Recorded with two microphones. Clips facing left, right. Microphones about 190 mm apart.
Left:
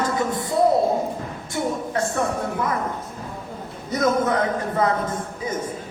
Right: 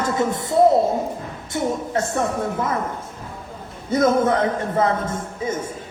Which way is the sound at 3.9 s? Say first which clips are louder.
Right 3 dB; 25° right (ahead or behind).